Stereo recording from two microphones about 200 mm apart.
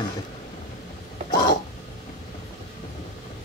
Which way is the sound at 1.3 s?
20° left (ahead or behind).